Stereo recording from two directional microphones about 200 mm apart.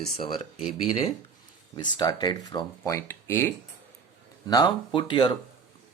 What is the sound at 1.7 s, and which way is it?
Speech, 20° left (ahead or behind).